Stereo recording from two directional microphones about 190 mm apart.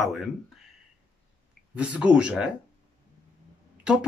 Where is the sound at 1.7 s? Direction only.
5° right (ahead or behind).